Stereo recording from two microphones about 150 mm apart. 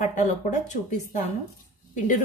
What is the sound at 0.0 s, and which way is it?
Speech, 55° left (ahead or behind).